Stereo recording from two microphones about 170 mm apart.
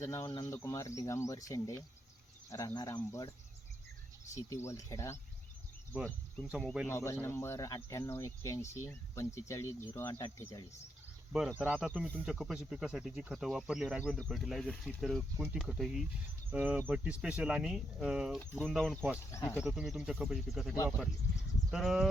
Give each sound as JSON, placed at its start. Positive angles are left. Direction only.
{"t": 0.0, "sound": "speech", "side_deg": 20}
{"t": 4.4, "sound": "speech", "side_deg": 15}
{"t": 6.8, "sound": "speech", "side_deg": 15}
{"t": 11.3, "sound": "speech", "side_deg": 0}
{"t": 19.3, "sound": "speech", "side_deg": 15}
{"t": 19.5, "sound": "speech", "side_deg": -5}